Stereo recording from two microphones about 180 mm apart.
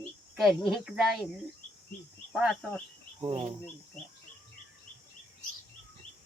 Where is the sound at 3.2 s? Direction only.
35° right (ahead or behind).